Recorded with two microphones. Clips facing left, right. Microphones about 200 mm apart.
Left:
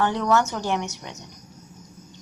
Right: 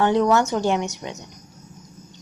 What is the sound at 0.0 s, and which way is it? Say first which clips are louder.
Speech: right 4 dB; 20° right (ahead or behind).